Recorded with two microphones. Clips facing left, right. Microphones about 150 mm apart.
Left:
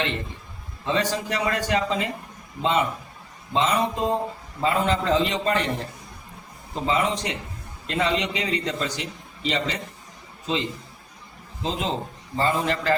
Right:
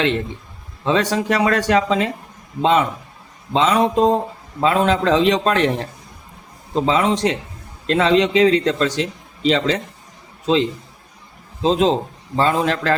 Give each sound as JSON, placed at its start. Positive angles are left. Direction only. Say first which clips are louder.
{"t": 0.9, "sound": "a man's voice", "louder": "right 7 dB", "side_deg": -90}
{"t": 11.6, "sound": "a man's voice", "louder": "right 11 dB", "side_deg": -90}